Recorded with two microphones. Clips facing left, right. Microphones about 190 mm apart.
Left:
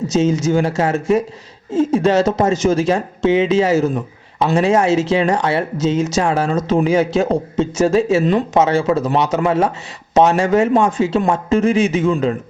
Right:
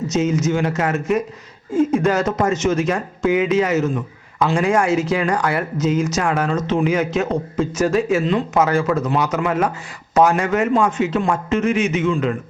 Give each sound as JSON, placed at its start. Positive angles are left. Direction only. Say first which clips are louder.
{"t": 0.1, "sound": "speech", "louder": "left 3 dB", "side_deg": 30}